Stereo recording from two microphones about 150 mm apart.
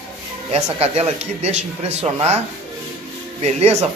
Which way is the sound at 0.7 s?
45° right (ahead or behind).